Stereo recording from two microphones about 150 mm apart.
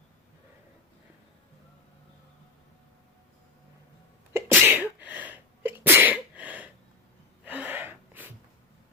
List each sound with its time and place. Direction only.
4.4 s sneeze: 15° right (ahead or behind)
7.4 s gasp: 10° right (ahead or behind)